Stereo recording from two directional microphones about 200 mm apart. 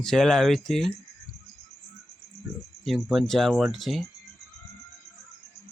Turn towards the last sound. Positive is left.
turn(degrees=0)  # may be behind; listen again after turning